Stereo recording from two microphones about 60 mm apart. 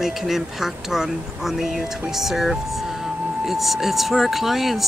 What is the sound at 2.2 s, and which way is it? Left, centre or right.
Speech, centre.